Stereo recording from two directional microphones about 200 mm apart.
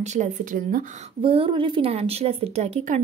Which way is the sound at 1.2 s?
25° right (ahead or behind).